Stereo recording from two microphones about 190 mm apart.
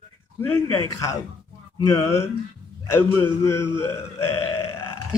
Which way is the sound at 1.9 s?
15° left (ahead or behind).